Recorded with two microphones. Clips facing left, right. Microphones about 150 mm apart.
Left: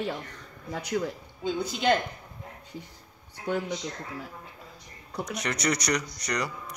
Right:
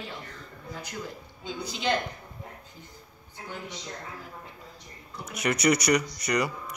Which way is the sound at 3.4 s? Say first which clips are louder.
Left 10 dB; 60° left (ahead or behind).